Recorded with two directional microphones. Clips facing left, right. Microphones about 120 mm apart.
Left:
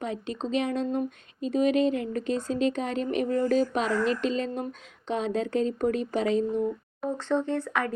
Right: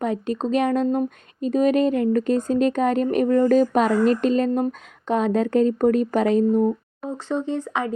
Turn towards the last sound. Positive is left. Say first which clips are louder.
# right 3 dB
turn(degrees=-20)  # may be behind; listen again after turning